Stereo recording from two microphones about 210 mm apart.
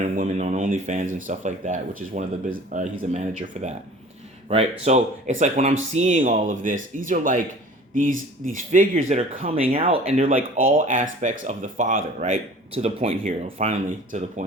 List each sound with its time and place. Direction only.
0.0 s speech: 35° right (ahead or behind)
4.9 s speech: 35° right (ahead or behind)
8.4 s speech: 40° right (ahead or behind)